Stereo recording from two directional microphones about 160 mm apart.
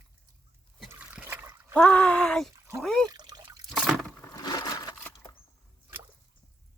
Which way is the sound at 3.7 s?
Centre (ahead or behind).